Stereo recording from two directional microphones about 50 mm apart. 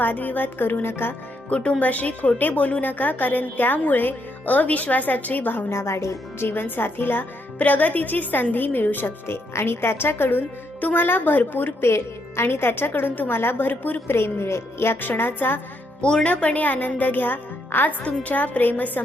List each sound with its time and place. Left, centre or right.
0.0 s a woman's voice: left
1.5 s speech: left
5.7 s speech: left
6.4 s speech: left
11.9 s a woman's voice: left
14.2 s speech: left
15.0 s speech: left
16.0 s speech: centre; by 19.0 s left